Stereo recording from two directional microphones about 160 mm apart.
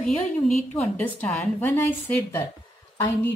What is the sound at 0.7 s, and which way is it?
A woman's voice, 10° left (ahead or behind).